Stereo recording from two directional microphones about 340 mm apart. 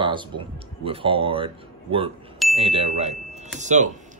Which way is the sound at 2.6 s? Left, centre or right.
Centre.